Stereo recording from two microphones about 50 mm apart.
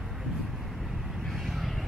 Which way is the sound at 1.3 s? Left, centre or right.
Centre.